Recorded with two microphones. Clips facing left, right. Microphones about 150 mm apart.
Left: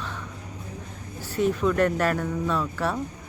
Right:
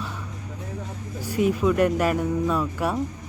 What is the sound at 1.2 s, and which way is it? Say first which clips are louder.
Speech: right 2 dB; 10° right (ahead or behind).